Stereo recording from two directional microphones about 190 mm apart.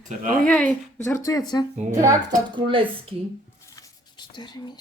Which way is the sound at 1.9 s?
15° right (ahead or behind).